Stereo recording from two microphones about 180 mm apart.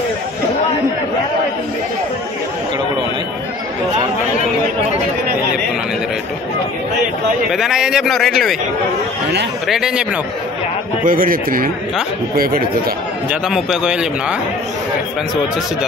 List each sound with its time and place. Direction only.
7.5 s a man's voice: centre (ahead or behind)
9.7 s a man's voice: 5° right (ahead or behind)
11.1 s speech: 50° right (ahead or behind)
13.3 s a man's voice: centre (ahead or behind)